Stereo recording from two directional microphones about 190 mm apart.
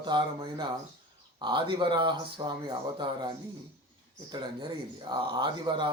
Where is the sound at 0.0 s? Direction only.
25° right (ahead or behind).